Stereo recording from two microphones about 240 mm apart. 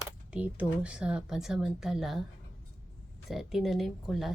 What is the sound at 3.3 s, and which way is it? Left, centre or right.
Speech, centre.